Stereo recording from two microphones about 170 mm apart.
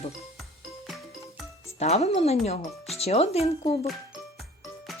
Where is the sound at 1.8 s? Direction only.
40° left (ahead or behind).